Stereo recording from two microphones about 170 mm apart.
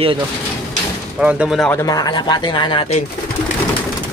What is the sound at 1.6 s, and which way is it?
Speech, 20° left (ahead or behind).